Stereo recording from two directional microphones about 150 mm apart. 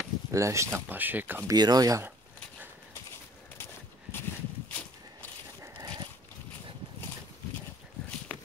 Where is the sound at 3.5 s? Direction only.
15° left (ahead or behind).